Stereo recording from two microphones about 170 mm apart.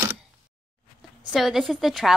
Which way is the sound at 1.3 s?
Centre (ahead or behind).